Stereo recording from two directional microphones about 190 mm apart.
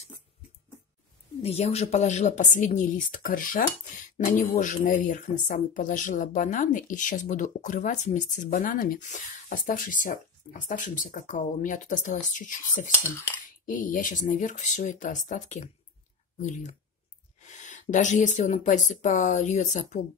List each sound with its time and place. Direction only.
1.4 s speech: 35° left (ahead or behind)